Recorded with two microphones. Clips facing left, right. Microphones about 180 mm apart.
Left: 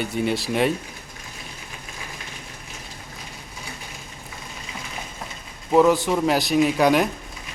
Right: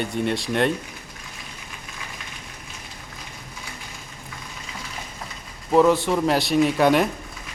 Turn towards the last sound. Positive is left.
turn(degrees=0)  # may be behind; listen again after turning